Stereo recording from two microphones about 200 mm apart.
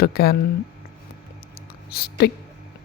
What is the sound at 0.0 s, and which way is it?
Speech, 50° left (ahead or behind).